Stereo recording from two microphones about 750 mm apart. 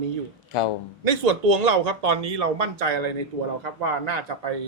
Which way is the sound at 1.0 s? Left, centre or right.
Right.